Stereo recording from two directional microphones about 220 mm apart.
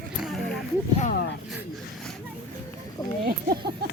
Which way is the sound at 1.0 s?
35° left (ahead or behind).